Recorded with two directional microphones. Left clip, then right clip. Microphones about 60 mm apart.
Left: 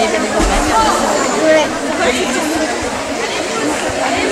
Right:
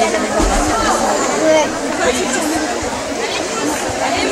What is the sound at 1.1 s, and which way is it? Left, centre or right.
Chatter, centre.